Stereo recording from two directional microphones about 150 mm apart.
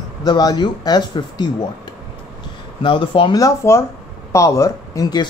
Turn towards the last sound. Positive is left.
turn(degrees=25)  # may be behind; listen again after turning